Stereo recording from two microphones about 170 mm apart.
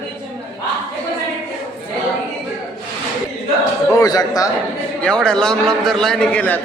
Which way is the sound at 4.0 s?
20° left (ahead or behind).